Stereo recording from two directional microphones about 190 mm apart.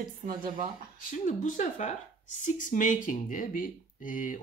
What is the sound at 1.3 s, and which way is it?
Speech, 40° left (ahead or behind).